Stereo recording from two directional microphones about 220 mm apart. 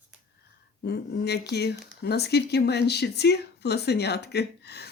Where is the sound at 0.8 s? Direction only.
45° left (ahead or behind).